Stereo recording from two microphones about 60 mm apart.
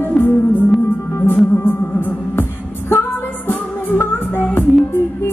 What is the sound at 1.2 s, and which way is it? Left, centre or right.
Music, left.